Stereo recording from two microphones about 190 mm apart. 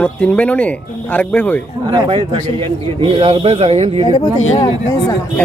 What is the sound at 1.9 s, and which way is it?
A man's voice, 25° right (ahead or behind).